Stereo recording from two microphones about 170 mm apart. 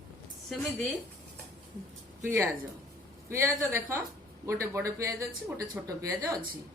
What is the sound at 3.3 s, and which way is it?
A woman's voice, 15° right (ahead or behind).